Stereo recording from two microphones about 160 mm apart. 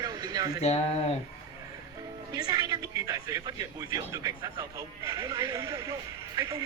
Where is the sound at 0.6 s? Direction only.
40° left (ahead or behind).